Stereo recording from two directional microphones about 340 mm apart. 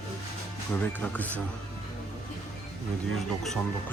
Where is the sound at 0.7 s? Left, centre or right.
Centre.